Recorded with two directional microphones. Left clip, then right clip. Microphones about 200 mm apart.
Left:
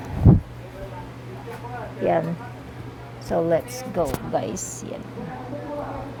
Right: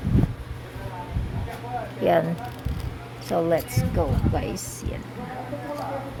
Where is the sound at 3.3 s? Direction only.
10° left (ahead or behind).